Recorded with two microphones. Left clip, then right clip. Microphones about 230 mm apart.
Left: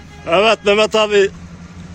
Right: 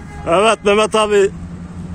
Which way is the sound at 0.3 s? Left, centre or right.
Centre.